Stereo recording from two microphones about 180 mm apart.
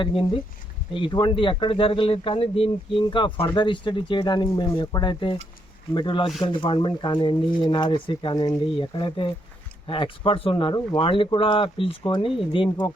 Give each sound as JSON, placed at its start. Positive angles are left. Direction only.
{"t": 0.0, "sound": "speech", "side_deg": 30}